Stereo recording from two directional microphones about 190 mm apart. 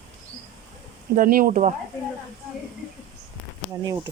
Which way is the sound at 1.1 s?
50° right (ahead or behind).